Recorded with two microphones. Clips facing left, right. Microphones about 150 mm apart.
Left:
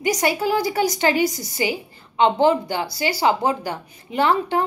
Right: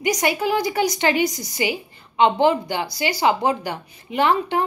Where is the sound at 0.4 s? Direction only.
35° left (ahead or behind).